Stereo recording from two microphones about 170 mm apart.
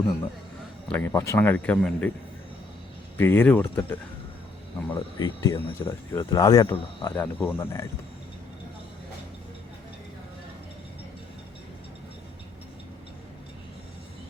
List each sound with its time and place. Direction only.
0.9 s a man's voice: 10° left (ahead or behind)
3.2 s a man's voice: 10° left (ahead or behind)
4.9 s speech: 25° left (ahead or behind)
5.9 s speech: 20° left (ahead or behind)
7.2 s a man's voice: 10° left (ahead or behind)